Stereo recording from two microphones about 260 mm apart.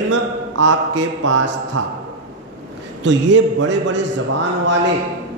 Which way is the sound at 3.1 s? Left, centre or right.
Right.